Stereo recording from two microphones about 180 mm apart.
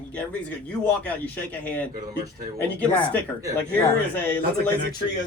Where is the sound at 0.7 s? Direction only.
5° left (ahead or behind).